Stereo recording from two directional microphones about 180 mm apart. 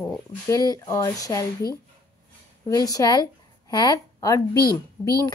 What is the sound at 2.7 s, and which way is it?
A woman's voice, 20° left (ahead or behind).